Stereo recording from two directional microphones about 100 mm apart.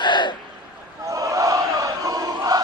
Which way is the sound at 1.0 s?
30° right (ahead or behind).